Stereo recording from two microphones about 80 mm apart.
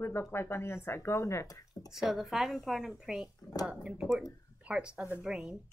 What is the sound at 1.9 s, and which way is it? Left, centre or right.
A woman's voice, centre.